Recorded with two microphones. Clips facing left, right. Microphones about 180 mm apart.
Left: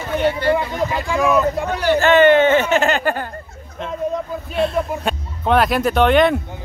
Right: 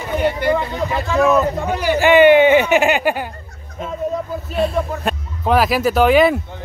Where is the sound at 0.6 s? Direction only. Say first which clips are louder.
Even; 15° left (ahead or behind).